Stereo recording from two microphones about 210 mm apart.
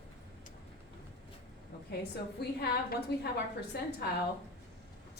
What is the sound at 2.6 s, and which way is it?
Speech, 50° left (ahead or behind).